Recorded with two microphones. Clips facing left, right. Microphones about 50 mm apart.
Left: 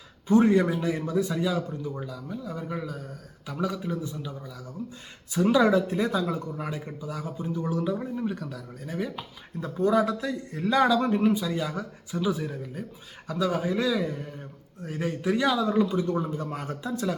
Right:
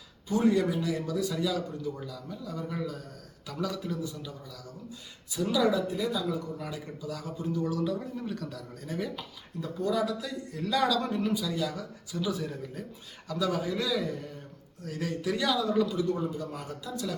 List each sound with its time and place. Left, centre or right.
0.3 s a man's voice: left
5.3 s speech: left
6.6 s a man's voice: left; by 9.2 s centre
9.6 s a man's voice: left